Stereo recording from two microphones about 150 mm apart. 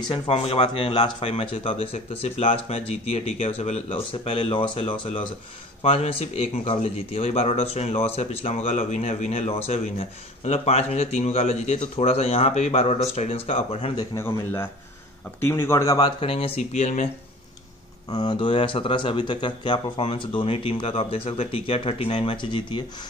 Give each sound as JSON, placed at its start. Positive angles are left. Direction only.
{"t": 0.1, "sound": "speech", "side_deg": 40}
{"t": 13.9, "sound": "speech", "side_deg": 15}
{"t": 16.2, "sound": "speech", "side_deg": 40}
{"t": 18.1, "sound": "speech", "side_deg": 30}